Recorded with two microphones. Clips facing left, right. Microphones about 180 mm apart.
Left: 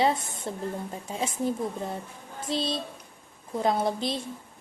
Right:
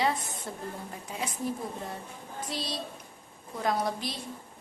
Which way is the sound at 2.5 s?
25° left (ahead or behind).